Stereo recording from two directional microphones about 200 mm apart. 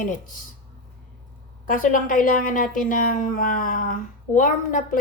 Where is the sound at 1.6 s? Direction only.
40° left (ahead or behind).